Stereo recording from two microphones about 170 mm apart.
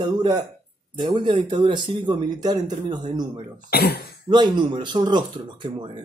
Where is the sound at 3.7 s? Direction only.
65° left (ahead or behind).